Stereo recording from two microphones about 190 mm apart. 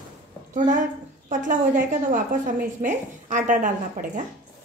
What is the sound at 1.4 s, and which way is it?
A woman's voice, 45° right (ahead or behind).